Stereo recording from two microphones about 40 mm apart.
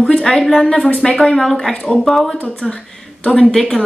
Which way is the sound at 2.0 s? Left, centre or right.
Centre.